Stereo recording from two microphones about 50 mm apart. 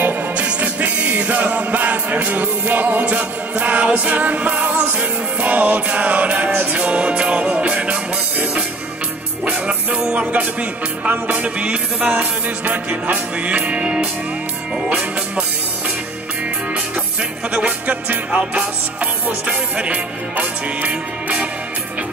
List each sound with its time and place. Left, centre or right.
0.0 s music: right
6.8 s music: right
17.5 s music: right